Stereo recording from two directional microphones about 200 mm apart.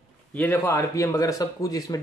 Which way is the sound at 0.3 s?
10° left (ahead or behind).